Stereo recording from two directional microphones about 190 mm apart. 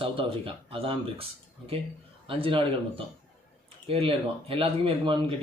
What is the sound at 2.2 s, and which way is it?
Speech, 30° right (ahead or behind).